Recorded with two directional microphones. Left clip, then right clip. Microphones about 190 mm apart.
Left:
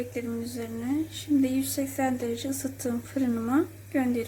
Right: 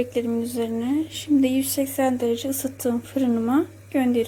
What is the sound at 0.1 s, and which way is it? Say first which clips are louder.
Speech: right 9 dB; 30° right (ahead or behind).